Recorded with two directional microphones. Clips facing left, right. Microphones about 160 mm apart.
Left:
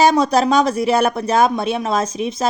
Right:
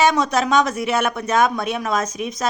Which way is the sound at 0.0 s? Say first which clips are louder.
Left 4 dB; 35° left (ahead or behind).